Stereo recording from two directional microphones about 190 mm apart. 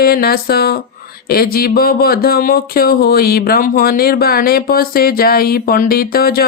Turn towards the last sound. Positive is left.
turn(degrees=50)  # may be behind; listen again after turning